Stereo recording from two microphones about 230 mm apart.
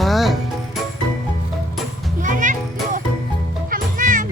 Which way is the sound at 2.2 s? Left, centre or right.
Right.